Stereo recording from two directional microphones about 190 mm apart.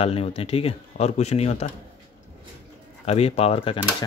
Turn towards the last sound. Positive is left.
turn(degrees=30)  # may be behind; listen again after turning